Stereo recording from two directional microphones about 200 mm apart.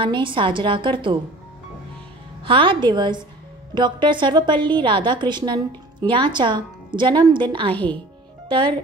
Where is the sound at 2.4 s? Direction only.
25° right (ahead or behind).